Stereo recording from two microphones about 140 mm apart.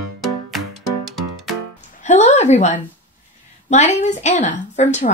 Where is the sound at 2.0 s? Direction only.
55° left (ahead or behind).